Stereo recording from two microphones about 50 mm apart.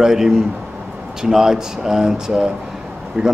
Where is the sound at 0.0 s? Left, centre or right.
Centre.